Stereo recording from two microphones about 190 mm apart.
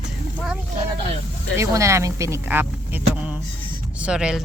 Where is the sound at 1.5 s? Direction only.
15° right (ahead or behind).